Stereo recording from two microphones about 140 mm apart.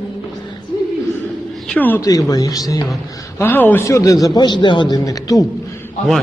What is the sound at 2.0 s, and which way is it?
Speech, 25° left (ahead or behind).